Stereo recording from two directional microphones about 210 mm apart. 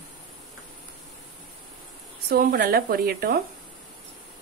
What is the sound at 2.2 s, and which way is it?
A woman's voice, 45° right (ahead or behind).